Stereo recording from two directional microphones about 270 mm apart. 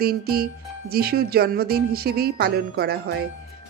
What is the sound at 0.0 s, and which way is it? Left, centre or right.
Speech, right.